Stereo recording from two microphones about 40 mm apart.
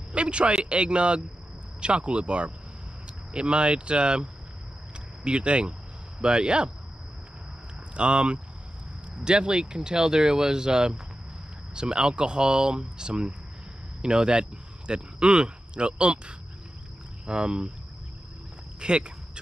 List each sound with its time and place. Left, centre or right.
0.1 s speech: right
7.9 s speech: right
18.8 s speech: right